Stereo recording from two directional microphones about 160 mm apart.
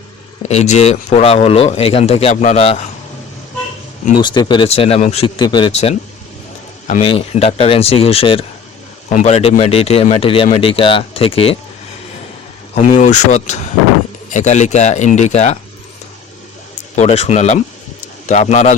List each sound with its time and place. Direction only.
0.4 s a man's voice: 45° left (ahead or behind)
4.2 s a man's voice: 30° left (ahead or behind)
5.2 s speech: 30° left (ahead or behind)
5.7 s a man's voice: 40° left (ahead or behind)
7.0 s a man's voice: 35° left (ahead or behind)
12.7 s speech: 50° left (ahead or behind)
16.9 s speech: 45° left (ahead or behind)